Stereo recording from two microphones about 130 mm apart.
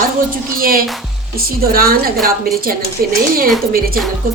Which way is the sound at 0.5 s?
90° right.